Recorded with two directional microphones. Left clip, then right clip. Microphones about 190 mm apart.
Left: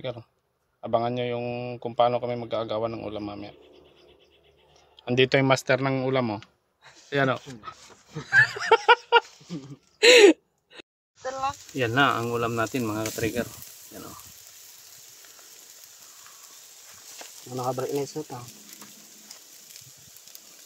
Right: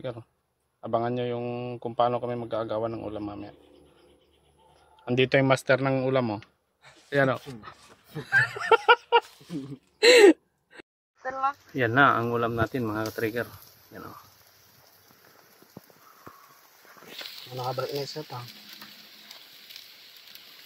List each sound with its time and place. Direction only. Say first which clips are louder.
0.7 s a man's voice: left 2 dB; 5° left (ahead or behind)
5.0 s a man's voice: left 1 dB; 10° left (ahead or behind)
9.9 s gasp: left 1 dB; centre (ahead or behind)
11.2 s speech: right 1 dB; 55° left (ahead or behind)
11.7 s a man's voice: right 2 dB; centre (ahead or behind)
17.6 s speech: left 3 dB; 25° left (ahead or behind)